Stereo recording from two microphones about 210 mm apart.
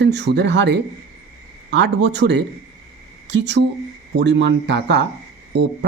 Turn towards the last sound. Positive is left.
turn(degrees=-55)  # may be behind; listen again after turning